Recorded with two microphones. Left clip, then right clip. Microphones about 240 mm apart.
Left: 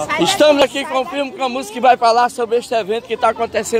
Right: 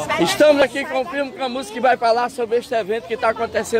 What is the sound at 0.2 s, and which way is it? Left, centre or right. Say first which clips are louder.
A man's voice: left 2 dB; left.